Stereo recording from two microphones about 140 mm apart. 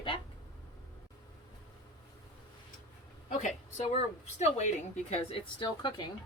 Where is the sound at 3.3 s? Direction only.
60° left (ahead or behind).